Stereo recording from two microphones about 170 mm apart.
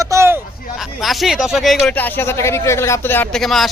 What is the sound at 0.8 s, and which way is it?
Speech, centre (ahead or behind).